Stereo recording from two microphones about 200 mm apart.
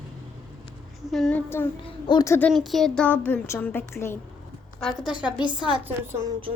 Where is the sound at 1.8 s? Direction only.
20° left (ahead or behind).